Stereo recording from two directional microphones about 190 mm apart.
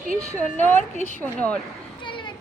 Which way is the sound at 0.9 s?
35° right (ahead or behind).